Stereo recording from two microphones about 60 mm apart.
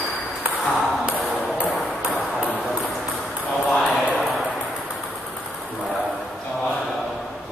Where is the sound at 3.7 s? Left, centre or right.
Left.